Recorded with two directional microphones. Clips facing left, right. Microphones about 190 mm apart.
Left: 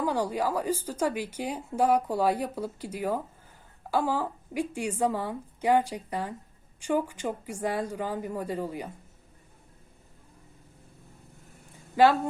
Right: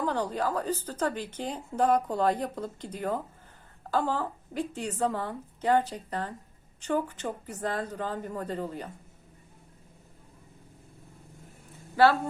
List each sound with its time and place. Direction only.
0.0 s a woman's voice: 10° left (ahead or behind)
11.9 s a woman's voice: 15° left (ahead or behind)